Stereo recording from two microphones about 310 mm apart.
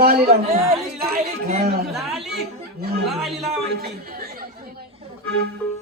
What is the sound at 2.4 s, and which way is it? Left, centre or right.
Chatter, right.